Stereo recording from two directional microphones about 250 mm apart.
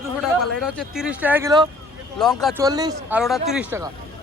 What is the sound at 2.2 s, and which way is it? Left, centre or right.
Speech, centre.